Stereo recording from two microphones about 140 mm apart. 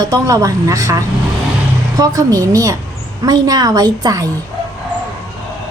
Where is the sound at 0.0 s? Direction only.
25° right (ahead or behind).